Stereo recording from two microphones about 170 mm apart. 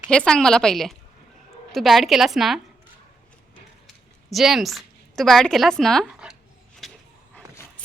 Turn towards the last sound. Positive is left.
turn(degrees=0)  # may be behind; listen again after turning